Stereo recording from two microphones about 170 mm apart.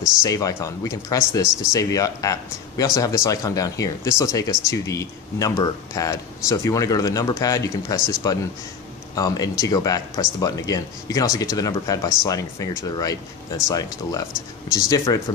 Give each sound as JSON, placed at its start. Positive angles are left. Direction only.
{"t": 0.2, "sound": "speech", "side_deg": 20}